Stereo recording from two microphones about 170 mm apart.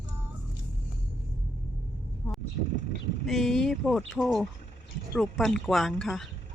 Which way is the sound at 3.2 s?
Centre (ahead or behind).